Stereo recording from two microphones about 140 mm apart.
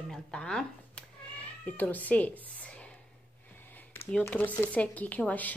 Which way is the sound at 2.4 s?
10° left (ahead or behind).